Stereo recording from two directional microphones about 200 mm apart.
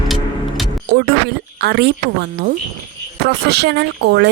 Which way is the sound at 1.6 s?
55° right (ahead or behind).